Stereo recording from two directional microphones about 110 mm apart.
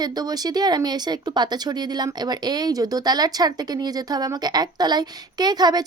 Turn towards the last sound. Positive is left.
turn(degrees=-40)  # may be behind; listen again after turning